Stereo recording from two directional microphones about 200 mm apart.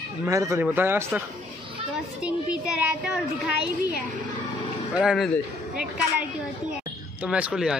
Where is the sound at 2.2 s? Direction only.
5° right (ahead or behind).